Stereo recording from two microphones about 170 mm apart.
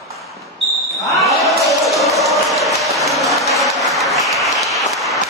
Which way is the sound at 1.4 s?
20° left (ahead or behind).